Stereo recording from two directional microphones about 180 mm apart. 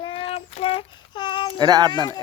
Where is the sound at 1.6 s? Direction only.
20° right (ahead or behind).